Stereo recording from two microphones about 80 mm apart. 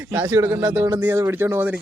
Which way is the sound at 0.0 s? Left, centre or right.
Right.